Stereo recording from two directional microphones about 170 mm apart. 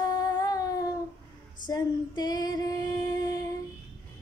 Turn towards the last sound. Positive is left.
turn(degrees=20)  # may be behind; listen again after turning